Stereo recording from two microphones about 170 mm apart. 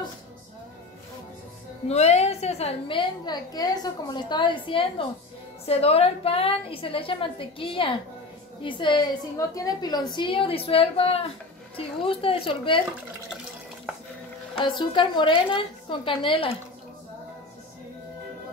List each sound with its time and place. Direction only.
1.9 s a woman's voice: 40° left (ahead or behind)
14.6 s a woman's voice: 30° left (ahead or behind)